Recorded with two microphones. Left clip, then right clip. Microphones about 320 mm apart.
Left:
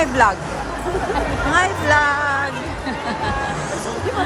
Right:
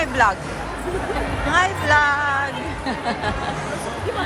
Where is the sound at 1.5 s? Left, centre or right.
Centre.